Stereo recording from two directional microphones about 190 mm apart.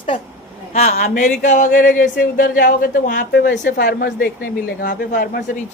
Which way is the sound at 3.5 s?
65° left (ahead or behind).